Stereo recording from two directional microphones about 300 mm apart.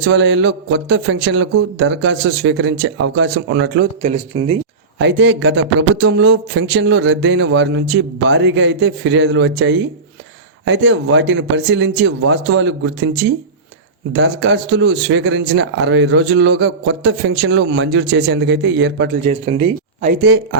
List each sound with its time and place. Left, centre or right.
0.0 s speech: right
4.3 s speech: centre
4.9 s speech: right
19.3 s speech: right